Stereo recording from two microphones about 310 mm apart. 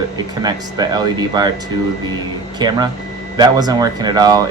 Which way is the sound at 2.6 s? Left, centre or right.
Centre.